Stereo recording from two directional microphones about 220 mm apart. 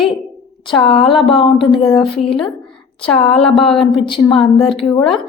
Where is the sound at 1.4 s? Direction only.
20° left (ahead or behind).